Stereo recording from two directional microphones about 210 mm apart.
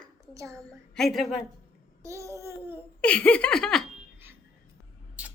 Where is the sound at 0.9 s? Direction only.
Centre (ahead or behind).